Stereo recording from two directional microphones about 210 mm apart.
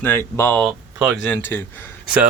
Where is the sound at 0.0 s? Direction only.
10° left (ahead or behind).